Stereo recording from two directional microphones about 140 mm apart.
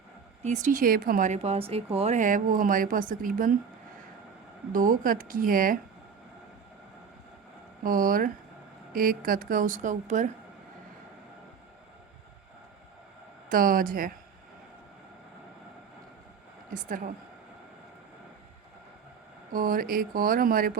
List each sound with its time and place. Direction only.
0.4 s speech: 65° right (ahead or behind)
1.4 s speech: 45° right (ahead or behind)
2.1 s speech: 70° right (ahead or behind)
4.7 s speech: 75° right (ahead or behind)
7.9 s speech: 85° right; by 10.3 s 60° right (ahead or behind)
13.5 s speech: 90° right
16.7 s speech: 70° right (ahead or behind)
19.5 s speech: 90° right